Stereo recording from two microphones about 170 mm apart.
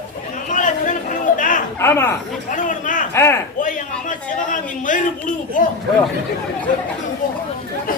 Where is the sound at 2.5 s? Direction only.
50° left (ahead or behind).